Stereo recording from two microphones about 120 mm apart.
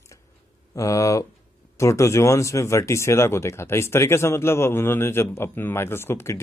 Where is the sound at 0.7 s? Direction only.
25° left (ahead or behind).